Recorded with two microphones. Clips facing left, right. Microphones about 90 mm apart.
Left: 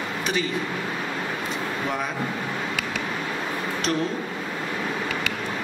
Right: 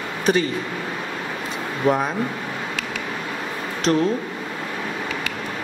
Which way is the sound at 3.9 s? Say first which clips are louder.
Right 7 dB; 40° right (ahead or behind).